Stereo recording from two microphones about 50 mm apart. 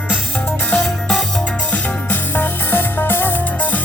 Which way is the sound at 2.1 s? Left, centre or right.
Left.